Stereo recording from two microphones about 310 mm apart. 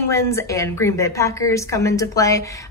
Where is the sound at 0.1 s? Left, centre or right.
Centre.